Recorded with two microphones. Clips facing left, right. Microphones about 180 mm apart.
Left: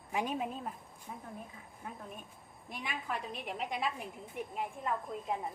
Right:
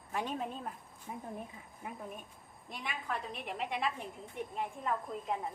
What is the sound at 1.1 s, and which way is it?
Speech, 15° right (ahead or behind).